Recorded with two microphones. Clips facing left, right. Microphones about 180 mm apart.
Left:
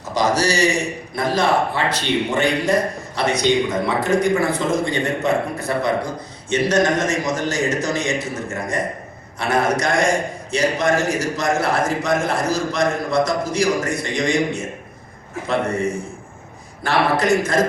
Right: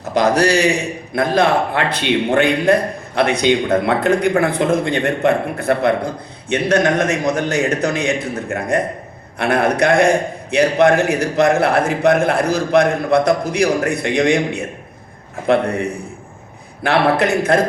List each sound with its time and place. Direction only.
0.1 s a man's voice: 60° right (ahead or behind)